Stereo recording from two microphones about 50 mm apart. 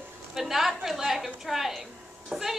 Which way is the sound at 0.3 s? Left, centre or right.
Centre.